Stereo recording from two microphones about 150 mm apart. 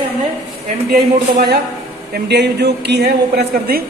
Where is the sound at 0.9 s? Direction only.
90° right.